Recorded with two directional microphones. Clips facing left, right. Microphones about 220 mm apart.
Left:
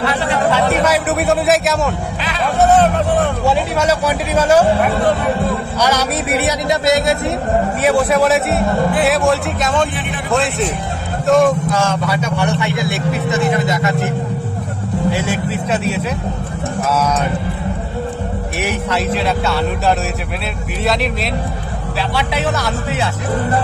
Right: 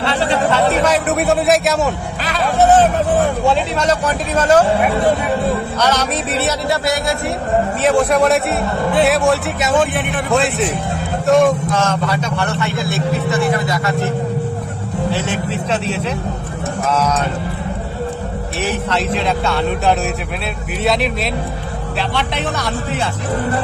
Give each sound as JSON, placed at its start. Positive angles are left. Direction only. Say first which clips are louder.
{"t": 0.0, "sound": "speech", "louder": "right 1 dB", "side_deg": -30}
{"t": 0.8, "sound": "a man's voice", "louder": "even", "side_deg": 5}
{"t": 5.8, "sound": "speech", "louder": "left 1 dB", "side_deg": 10}
{"t": 7.8, "sound": "speech", "louder": "even", "side_deg": 5}
{"t": 18.6, "sound": "speech", "louder": "even", "side_deg": 10}
{"t": 22.1, "sound": "speech", "louder": "left 5 dB", "side_deg": 5}